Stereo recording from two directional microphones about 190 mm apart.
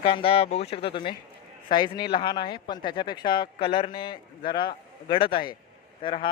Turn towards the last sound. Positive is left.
turn(degrees=25)  # may be behind; listen again after turning